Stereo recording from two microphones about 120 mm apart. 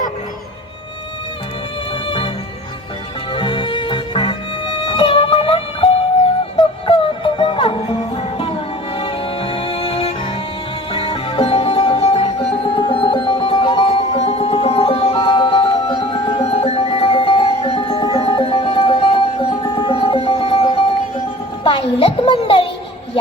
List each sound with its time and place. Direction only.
2.0 s music: 45° left (ahead or behind)
3.3 s music: 45° left (ahead or behind)